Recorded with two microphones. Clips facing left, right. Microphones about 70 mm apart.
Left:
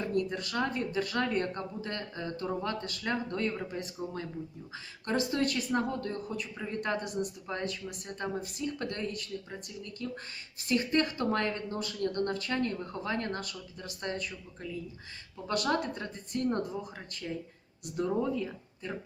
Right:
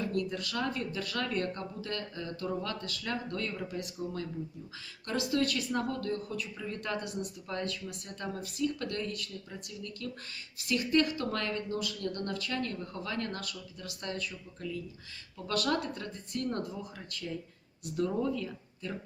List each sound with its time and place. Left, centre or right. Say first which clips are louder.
0.0 s speech: left 2 dB; left
7.4 s speech: left 1 dB; centre
8.0 s speech: left 5 dB; left
15.4 s speech: left 1 dB; left
17.9 s speech: left 1 dB; centre